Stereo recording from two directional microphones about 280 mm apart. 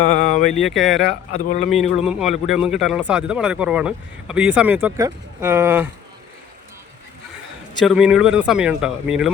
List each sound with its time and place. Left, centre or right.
0.0 s a sound: left
0.6 s speech: centre
1.3 s speech: left
1.7 s speech: centre
7.9 s speech: centre